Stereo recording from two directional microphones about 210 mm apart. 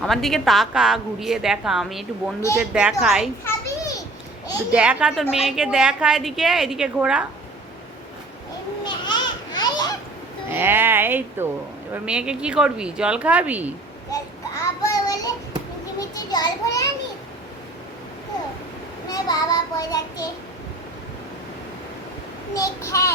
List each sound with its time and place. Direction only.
0.0 s a woman's voice: centre (ahead or behind)
3.4 s children playing: 15° left (ahead or behind)
4.7 s a woman's voice: 5° right (ahead or behind)
8.8 s a sound: 20° left (ahead or behind)
10.5 s a woman's voice: 10° right (ahead or behind)
14.1 s child singing: 15° left (ahead or behind)
16.0 s a sound: 20° left (ahead or behind)
19.0 s child singing: 20° left (ahead or behind)
22.5 s child singing: 15° left (ahead or behind)